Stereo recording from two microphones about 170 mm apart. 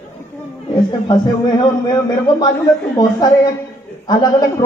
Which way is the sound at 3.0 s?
20° left (ahead or behind).